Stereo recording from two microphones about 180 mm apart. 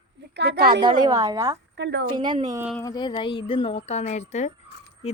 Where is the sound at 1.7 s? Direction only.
75° right (ahead or behind).